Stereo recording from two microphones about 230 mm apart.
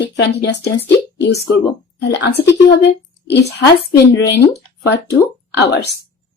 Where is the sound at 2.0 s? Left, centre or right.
Left.